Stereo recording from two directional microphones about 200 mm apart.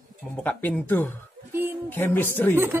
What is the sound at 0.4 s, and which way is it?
Speech, 10° left (ahead or behind).